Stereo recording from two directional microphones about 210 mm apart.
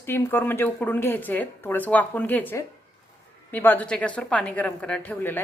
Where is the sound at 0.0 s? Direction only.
10° left (ahead or behind).